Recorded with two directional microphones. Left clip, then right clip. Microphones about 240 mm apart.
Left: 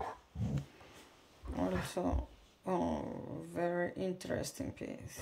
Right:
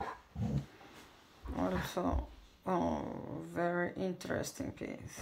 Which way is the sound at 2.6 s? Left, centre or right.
Centre.